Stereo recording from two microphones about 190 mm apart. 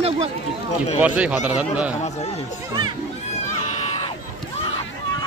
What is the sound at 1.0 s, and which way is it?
Speech, 5° right (ahead or behind).